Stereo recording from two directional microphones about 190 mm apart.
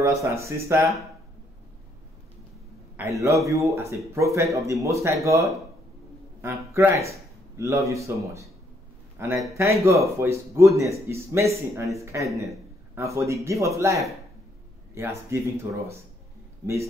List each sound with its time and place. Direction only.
0.0 s a man's voice: 15° right (ahead or behind)
3.0 s a man's voice: 15° right (ahead or behind)
9.5 s a man's voice: 15° right (ahead or behind)
15.0 s a man's voice: 15° right (ahead or behind)